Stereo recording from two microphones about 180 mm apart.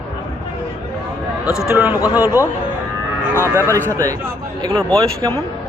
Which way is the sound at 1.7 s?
10° right (ahead or behind).